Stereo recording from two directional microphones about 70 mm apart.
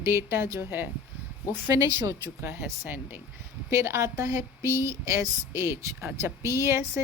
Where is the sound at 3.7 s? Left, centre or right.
Right.